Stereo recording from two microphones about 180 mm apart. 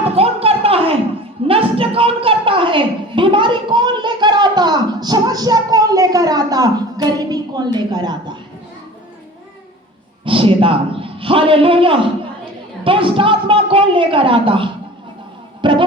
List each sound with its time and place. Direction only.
0.2 s a sound: 35° right (ahead or behind)
10.2 s a man's voice: 30° right (ahead or behind)
15.6 s music: 25° right (ahead or behind)